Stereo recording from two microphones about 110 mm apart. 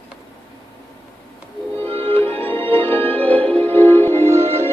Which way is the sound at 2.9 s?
15° left (ahead or behind).